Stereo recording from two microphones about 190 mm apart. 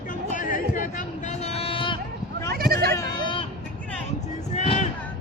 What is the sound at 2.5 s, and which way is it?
Bleat, 55° right (ahead or behind).